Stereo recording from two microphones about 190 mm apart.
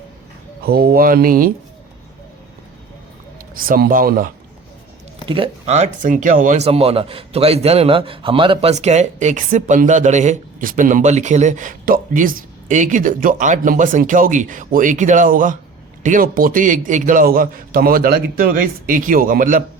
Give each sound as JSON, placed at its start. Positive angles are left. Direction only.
{"t": 0.6, "sound": "a man's voice", "side_deg": -55}
{"t": 3.5, "sound": "a man's voice", "side_deg": -50}
{"t": 5.3, "sound": "a man's voice", "side_deg": -30}